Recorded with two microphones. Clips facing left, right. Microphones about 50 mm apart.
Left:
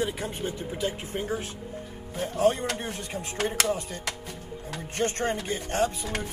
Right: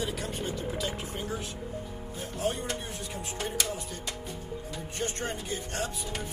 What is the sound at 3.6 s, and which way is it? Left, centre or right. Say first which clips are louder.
Speech: left 6 dB; left.